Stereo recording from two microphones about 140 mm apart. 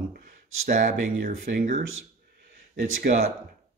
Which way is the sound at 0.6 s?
60° right (ahead or behind).